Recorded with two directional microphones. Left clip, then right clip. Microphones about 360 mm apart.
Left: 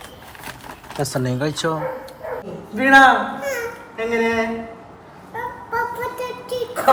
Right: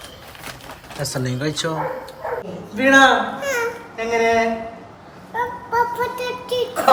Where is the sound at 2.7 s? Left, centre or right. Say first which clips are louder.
Left 1 dB; centre.